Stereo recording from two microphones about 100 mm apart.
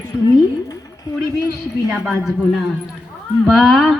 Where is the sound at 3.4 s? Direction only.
Centre (ahead or behind).